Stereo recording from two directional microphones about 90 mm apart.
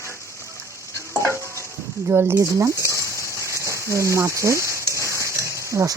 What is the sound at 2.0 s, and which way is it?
Speech, 25° right (ahead or behind).